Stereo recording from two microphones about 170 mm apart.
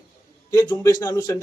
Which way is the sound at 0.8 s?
20° left (ahead or behind).